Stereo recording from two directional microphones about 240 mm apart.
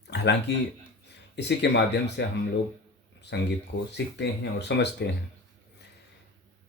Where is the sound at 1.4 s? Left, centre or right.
Left.